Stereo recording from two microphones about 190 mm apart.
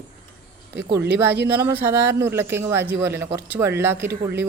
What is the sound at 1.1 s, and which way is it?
Speech, 10° right (ahead or behind).